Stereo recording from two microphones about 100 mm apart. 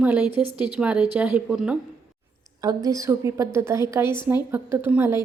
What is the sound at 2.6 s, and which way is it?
A woman's voice, 35° right (ahead or behind).